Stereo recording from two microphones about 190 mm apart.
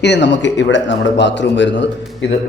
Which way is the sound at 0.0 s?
65° left (ahead or behind).